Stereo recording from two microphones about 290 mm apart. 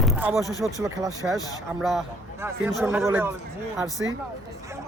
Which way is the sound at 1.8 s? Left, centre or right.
Centre.